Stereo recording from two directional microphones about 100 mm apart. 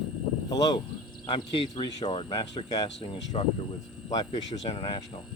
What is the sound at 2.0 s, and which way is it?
Speech, 90° left.